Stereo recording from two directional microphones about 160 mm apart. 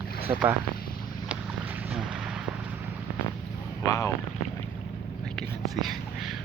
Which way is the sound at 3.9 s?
20° left (ahead or behind).